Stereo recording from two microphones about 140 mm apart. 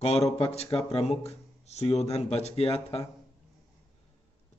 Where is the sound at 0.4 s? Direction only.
45° left (ahead or behind).